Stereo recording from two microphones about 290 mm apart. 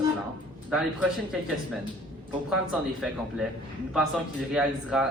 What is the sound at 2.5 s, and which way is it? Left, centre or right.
Speech, centre.